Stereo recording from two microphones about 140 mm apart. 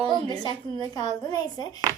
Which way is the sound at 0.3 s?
30° left (ahead or behind).